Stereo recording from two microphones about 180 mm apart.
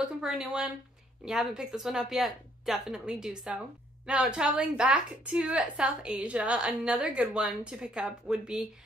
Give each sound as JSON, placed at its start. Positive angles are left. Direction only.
{"t": 0.0, "sound": "speech", "side_deg": -5}